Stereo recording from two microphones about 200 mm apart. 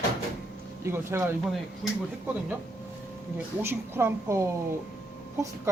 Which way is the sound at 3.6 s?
10° right (ahead or behind).